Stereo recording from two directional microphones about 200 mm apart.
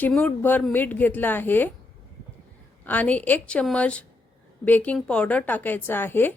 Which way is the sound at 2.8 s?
10° left (ahead or behind).